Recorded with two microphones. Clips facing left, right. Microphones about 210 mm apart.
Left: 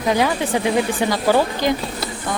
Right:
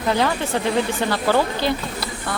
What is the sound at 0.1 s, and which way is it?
Speech, 15° left (ahead or behind).